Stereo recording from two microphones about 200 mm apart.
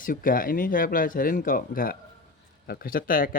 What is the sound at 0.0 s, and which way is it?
Speech, 45° left (ahead or behind).